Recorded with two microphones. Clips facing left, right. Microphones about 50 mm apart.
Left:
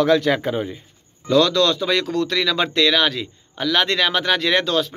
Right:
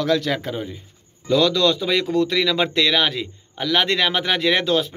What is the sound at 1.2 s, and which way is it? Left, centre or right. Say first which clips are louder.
A man's voice: left 1 dB; centre.